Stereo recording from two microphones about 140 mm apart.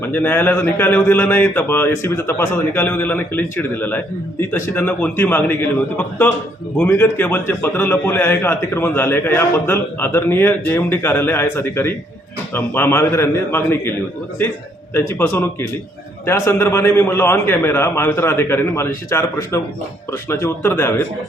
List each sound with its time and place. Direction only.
0.0 s a man's voice: 15° left (ahead or behind)
14.9 s a man's voice: 20° left (ahead or behind)